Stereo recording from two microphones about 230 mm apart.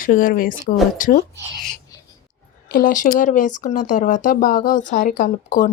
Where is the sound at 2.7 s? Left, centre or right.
Left.